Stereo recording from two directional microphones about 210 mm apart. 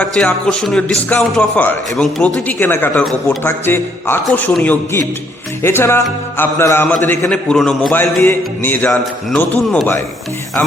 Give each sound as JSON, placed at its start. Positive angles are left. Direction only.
{"t": 0.0, "sound": "a man's voice", "side_deg": 5}